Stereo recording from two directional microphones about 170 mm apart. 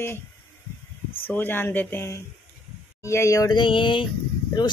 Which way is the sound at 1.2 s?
10° left (ahead or behind).